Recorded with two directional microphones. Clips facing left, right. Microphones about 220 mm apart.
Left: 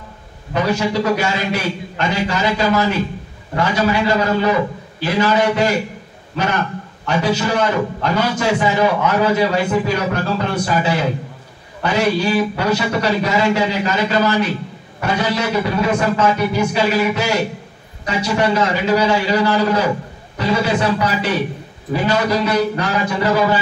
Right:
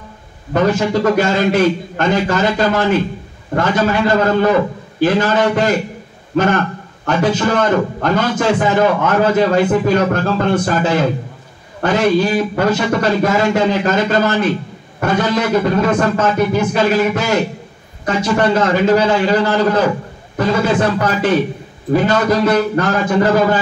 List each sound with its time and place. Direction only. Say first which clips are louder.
0.5 s a man's voice: right 4 dB; 50° right (ahead or behind)
7.1 s a man's voice: right 3 dB; 50° right (ahead or behind)